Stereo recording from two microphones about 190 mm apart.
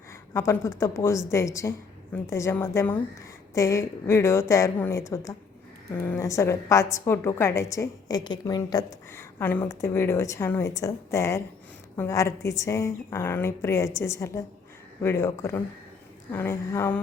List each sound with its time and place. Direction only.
0.3 s a woman's voice: 15° left (ahead or behind)